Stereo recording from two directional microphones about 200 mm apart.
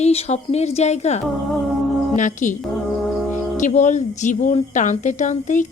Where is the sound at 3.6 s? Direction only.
35° left (ahead or behind).